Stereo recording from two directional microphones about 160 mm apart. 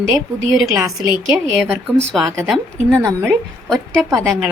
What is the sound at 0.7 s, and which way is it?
Speech, 20° right (ahead or behind).